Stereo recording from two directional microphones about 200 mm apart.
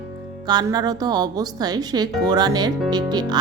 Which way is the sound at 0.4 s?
20° right (ahead or behind).